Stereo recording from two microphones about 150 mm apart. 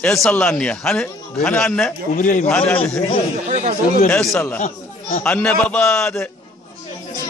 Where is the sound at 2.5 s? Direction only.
10° left (ahead or behind).